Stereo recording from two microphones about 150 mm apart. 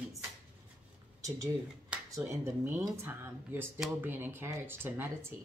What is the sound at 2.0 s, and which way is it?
Speech, 20° right (ahead or behind).